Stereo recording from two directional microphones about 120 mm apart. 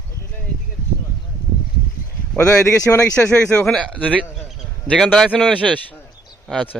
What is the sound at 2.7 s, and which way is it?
Speech, 20° left (ahead or behind).